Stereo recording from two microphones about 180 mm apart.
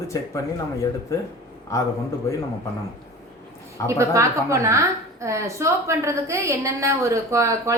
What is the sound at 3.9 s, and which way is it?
A woman's voice, 15° right (ahead or behind).